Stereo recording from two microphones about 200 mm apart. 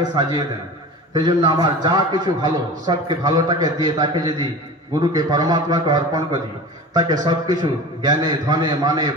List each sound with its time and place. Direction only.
0.0 s a man's voice: 20° right (ahead or behind)